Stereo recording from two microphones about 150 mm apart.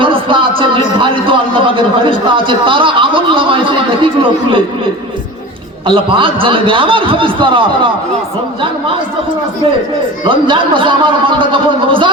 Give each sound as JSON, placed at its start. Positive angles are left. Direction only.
{"t": 0.0, "sound": "music", "side_deg": -35}
{"t": 0.9, "sound": "a man's voice", "side_deg": -35}
{"t": 5.8, "sound": "a man's voice", "side_deg": -35}
{"t": 10.2, "sound": "a man's voice", "side_deg": -35}